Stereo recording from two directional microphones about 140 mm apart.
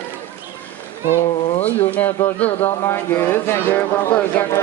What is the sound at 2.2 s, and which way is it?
Speech, 10° left (ahead or behind).